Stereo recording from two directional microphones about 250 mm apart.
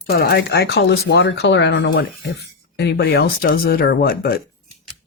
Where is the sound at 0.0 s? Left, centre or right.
Left.